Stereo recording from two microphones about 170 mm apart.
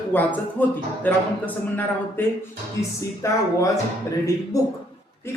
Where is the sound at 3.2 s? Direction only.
20° left (ahead or behind).